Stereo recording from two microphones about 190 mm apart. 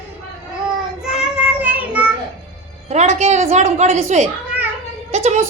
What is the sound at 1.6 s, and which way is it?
Child singing, 10° right (ahead or behind).